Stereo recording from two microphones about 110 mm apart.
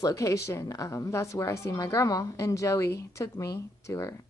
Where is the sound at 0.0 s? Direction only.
30° left (ahead or behind).